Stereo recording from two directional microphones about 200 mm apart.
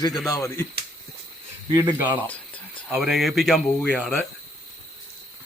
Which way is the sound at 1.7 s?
10° right (ahead or behind).